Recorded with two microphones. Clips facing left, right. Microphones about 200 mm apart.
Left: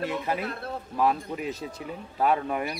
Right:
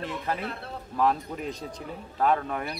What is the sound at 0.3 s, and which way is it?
A man's voice, 10° left (ahead or behind).